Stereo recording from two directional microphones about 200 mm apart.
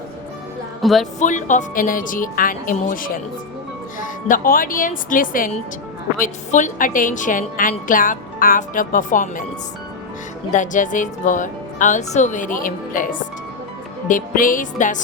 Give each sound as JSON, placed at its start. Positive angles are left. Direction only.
{"t": 0.8, "sound": "speech", "side_deg": 0}
{"t": 1.2, "sound": "a woman's voice", "side_deg": 40}
{"t": 10.5, "sound": "a woman's voice", "side_deg": 40}
{"t": 14.1, "sound": "a woman's voice", "side_deg": 45}